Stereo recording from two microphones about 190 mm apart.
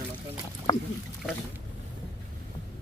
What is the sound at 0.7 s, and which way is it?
Speech, 30° left (ahead or behind).